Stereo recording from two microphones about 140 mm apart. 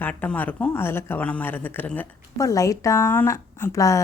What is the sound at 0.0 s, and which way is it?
Speech, 15° left (ahead or behind).